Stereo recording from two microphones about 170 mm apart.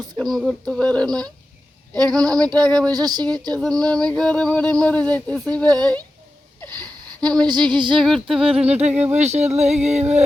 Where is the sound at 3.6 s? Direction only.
5° left (ahead or behind).